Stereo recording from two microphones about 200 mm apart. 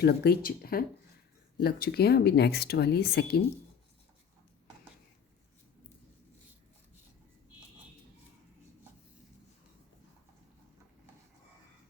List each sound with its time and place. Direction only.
0.0 s speech: 55° left (ahead or behind)